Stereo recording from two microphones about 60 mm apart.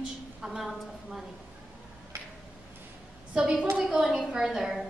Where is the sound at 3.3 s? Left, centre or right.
Centre.